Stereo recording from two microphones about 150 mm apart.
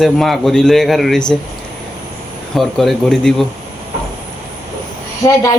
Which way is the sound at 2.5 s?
Centre (ahead or behind).